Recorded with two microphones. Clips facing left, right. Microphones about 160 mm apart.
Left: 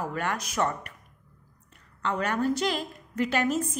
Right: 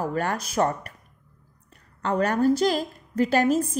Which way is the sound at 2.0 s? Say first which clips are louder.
Right 5 dB; 40° right (ahead or behind).